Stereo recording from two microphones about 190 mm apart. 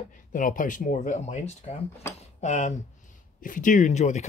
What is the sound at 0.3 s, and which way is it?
Speech, 45° left (ahead or behind).